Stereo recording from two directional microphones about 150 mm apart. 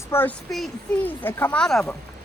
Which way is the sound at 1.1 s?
10° left (ahead or behind).